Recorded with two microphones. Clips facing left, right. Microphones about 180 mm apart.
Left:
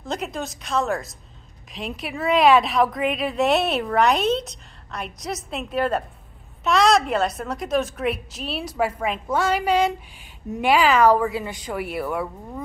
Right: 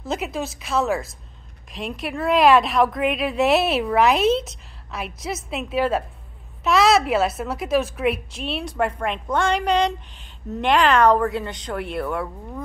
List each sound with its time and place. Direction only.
0.0 s a woman's voice: 5° right (ahead or behind)